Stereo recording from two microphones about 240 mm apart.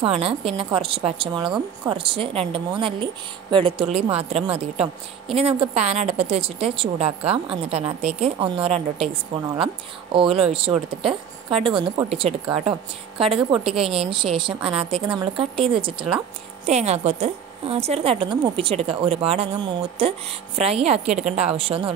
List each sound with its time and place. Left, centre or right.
0.0 s a woman's voice: right